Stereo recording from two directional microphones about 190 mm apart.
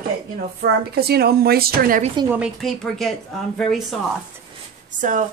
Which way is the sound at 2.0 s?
25° right (ahead or behind).